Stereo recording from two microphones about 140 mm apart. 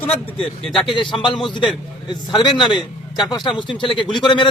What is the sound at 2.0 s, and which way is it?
A man's voice, 30° left (ahead or behind).